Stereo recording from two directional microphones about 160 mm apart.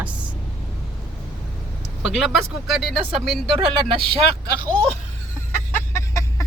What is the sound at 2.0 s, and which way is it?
Speech, centre (ahead or behind).